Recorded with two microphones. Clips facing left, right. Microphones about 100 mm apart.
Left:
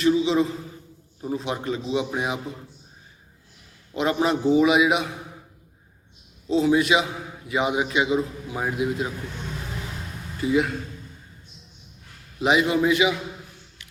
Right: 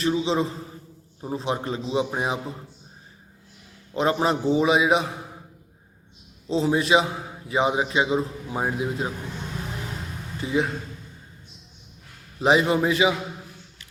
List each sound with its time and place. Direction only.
0.0 s a man's voice: 30° right (ahead or behind)
3.9 s a man's voice: 30° right (ahead or behind)
6.5 s a man's voice: 30° right (ahead or behind)
10.4 s speech: 25° right (ahead or behind)
12.4 s a man's voice: 35° right (ahead or behind)